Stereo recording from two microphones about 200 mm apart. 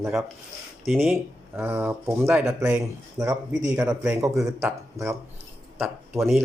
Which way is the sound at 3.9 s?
5° right (ahead or behind).